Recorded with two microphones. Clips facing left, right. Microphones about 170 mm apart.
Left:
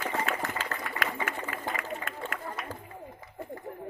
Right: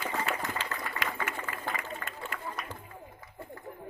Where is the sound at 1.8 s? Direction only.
50° left (ahead or behind).